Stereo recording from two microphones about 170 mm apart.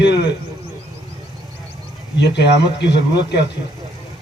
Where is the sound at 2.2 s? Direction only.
80° left.